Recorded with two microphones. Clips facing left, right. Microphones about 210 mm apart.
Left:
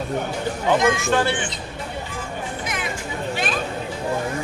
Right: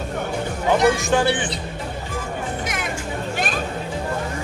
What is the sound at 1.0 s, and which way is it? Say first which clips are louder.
Speech: right 1 dB; 15° right (ahead or behind).